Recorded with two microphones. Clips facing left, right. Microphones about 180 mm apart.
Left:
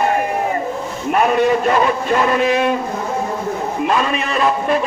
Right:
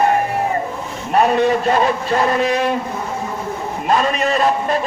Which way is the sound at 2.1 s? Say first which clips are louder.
Left 1 dB; 35° right (ahead or behind).